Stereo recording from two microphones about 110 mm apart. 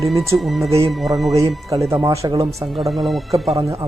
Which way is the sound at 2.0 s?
30° right (ahead or behind).